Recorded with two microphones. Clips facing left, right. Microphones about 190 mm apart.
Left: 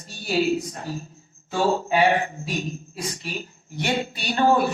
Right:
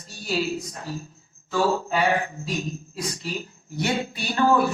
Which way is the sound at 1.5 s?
30° left (ahead or behind).